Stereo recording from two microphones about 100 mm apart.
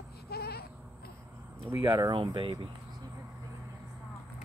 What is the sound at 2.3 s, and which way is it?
Speech, 45° right (ahead or behind).